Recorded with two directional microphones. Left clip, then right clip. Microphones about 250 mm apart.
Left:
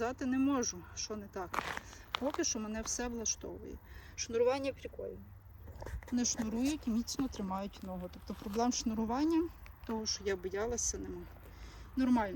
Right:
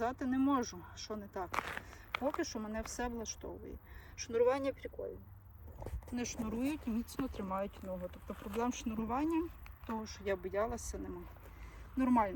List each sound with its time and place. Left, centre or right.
0.0 s speech: centre
6.4 s speech: centre